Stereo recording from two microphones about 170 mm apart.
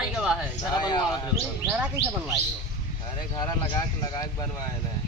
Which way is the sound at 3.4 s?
25° left (ahead or behind).